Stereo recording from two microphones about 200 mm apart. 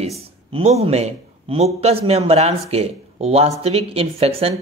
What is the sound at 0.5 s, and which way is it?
A man's voice, 30° right (ahead or behind).